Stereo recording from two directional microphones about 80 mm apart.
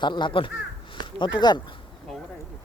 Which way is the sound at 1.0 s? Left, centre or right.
Left.